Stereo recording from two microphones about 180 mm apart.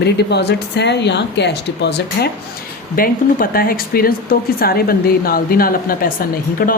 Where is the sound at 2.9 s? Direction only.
55° left (ahead or behind).